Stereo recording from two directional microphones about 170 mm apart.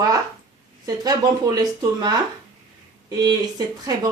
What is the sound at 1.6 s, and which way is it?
Speech, 25° right (ahead or behind).